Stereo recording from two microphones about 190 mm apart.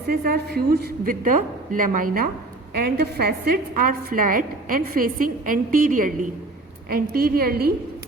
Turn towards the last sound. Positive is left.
turn(degrees=-50)  # may be behind; listen again after turning